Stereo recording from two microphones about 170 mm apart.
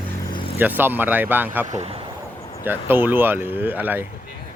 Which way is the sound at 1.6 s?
40° right (ahead or behind).